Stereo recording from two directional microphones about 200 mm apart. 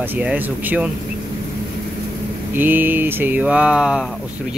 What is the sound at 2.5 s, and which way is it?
Speech, 10° right (ahead or behind).